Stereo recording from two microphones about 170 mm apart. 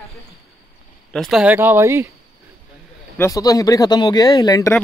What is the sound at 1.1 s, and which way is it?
Speech, centre (ahead or behind).